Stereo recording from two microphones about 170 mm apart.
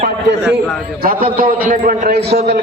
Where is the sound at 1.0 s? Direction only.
55° right (ahead or behind).